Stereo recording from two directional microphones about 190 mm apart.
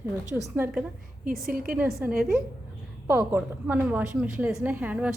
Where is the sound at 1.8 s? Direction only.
5° right (ahead or behind).